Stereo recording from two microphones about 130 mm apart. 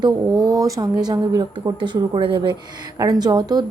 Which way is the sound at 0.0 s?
30° right (ahead or behind).